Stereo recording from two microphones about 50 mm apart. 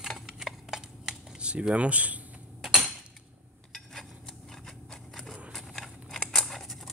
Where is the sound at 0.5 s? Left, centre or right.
Centre.